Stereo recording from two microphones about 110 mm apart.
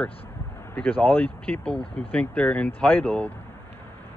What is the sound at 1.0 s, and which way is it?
Speech, 15° left (ahead or behind).